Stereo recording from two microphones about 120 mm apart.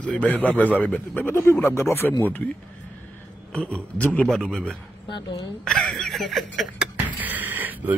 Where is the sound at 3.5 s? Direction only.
10° left (ahead or behind).